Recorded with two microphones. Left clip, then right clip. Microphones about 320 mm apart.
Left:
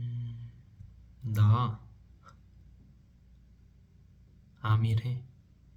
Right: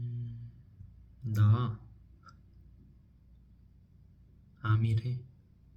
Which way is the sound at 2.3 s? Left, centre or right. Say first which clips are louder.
Even; centre.